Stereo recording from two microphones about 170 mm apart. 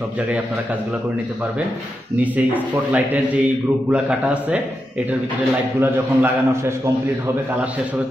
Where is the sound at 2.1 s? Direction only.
10° right (ahead or behind).